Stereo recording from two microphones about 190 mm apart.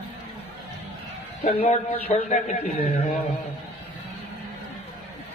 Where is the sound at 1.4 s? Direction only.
35° left (ahead or behind).